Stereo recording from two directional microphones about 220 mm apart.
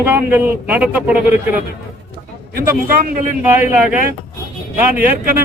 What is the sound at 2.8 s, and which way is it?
Speech, 40° right (ahead or behind).